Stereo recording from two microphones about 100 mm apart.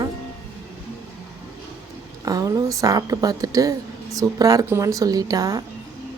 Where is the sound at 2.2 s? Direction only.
35° right (ahead or behind).